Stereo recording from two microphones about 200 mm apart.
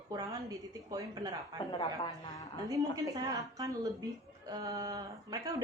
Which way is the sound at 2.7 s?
15° right (ahead or behind).